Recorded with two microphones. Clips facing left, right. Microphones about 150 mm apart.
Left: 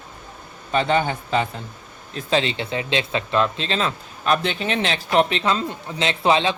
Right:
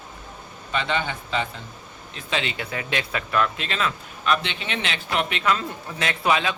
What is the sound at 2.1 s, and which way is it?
Speech, 35° left (ahead or behind).